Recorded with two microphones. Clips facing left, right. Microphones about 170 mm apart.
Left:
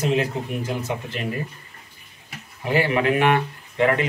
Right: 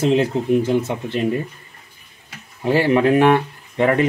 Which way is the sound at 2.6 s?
35° right (ahead or behind).